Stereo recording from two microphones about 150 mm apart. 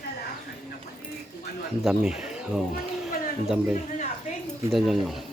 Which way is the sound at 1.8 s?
5° right (ahead or behind).